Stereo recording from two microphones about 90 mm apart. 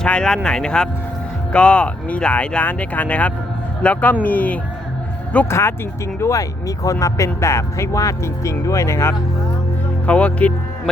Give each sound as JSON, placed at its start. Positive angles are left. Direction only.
{"t": 0.0, "sound": "speech", "side_deg": 10}
{"t": 5.5, "sound": "speech", "side_deg": 30}
{"t": 10.1, "sound": "speech", "side_deg": 15}